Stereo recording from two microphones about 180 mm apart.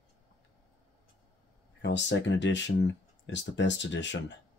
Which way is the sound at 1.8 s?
80° left.